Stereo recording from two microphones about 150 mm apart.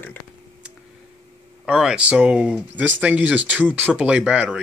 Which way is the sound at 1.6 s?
5° right (ahead or behind).